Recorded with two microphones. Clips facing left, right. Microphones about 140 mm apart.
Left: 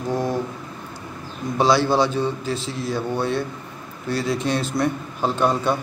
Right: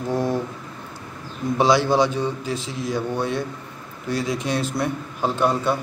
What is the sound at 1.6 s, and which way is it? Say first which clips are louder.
A man's voice: even; 15° right (ahead or behind).